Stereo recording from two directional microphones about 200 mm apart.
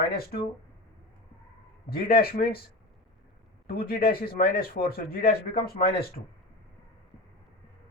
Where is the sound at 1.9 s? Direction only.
50° left (ahead or behind).